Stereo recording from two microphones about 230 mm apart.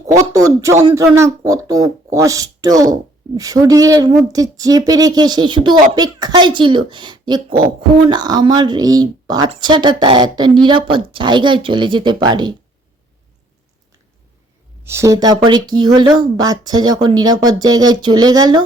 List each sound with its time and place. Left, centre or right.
0.2 s speech: centre
14.8 s speech: centre